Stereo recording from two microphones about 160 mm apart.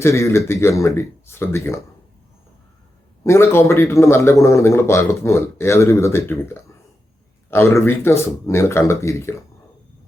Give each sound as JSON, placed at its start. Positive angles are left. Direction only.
{"t": 0.0, "sound": "a man's voice", "side_deg": 15}
{"t": 3.2, "sound": "a man's voice", "side_deg": 15}